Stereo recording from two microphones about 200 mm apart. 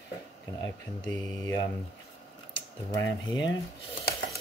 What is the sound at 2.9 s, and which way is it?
Speech, 15° left (ahead or behind).